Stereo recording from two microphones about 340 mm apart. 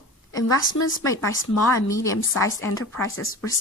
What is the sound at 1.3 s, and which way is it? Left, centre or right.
Speech, left.